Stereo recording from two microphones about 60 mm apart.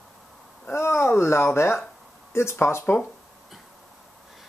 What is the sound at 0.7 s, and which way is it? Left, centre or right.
Speech, left.